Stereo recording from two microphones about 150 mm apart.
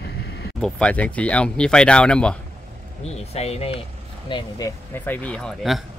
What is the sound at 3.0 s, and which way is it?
Speech, 45° left (ahead or behind).